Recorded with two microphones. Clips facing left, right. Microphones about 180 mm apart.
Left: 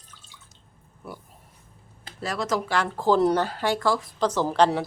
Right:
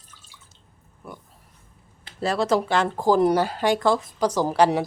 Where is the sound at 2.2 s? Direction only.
30° right (ahead or behind); by 4.8 s 10° right (ahead or behind).